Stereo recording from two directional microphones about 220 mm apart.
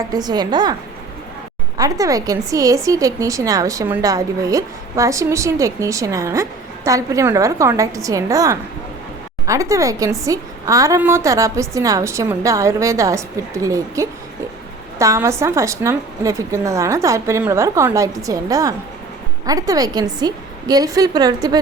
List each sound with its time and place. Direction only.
0.1 s a woman's voice: 20° right (ahead or behind)
1.8 s a woman's voice: 15° right (ahead or behind)